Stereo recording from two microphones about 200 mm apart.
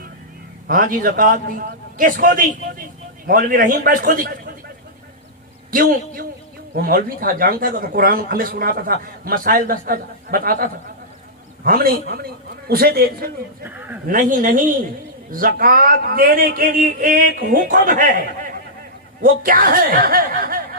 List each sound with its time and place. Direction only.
0.7 s a man's voice: 40° right (ahead or behind)
5.7 s a man's voice: 45° right (ahead or behind)
13.7 s a man's voice: 10° right (ahead or behind)
14.1 s a man's voice: 40° right (ahead or behind)